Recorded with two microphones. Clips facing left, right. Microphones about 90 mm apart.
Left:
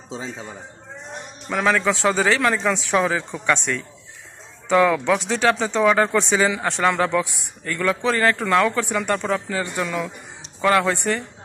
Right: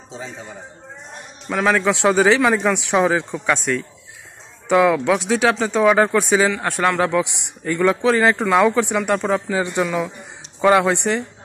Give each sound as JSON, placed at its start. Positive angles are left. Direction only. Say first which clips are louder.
{"t": 1.5, "sound": "speech", "louder": "right 2 dB", "side_deg": -5}
{"t": 7.6, "sound": "speech", "louder": "right 5 dB", "side_deg": -15}